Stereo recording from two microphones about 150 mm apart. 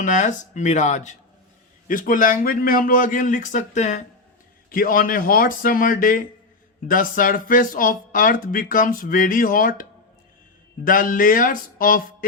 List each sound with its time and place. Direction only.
0.0 s speech: 55° left (ahead or behind)
1.9 s speech: 65° left (ahead or behind)
4.7 s speech: 70° left (ahead or behind)
10.8 s speech: 65° left (ahead or behind)